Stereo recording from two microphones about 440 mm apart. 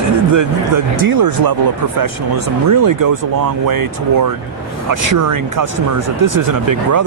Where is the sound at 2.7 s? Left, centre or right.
Right.